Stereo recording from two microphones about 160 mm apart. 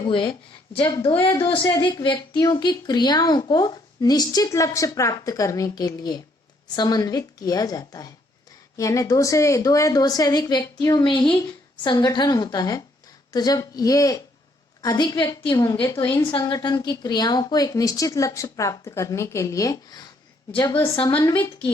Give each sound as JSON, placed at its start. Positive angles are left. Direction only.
{"t": 0.0, "sound": "speech", "side_deg": 30}